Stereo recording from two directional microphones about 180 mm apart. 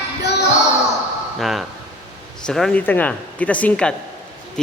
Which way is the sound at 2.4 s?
5° left (ahead or behind).